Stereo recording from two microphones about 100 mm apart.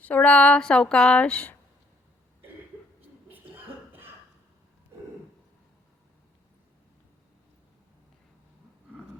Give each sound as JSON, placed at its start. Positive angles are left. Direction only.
{"t": 0.0, "sound": "speech", "side_deg": 15}
{"t": 3.2, "sound": "cough", "side_deg": -20}